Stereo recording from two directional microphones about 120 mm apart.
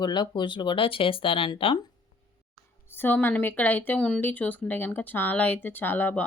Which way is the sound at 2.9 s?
15° left (ahead or behind).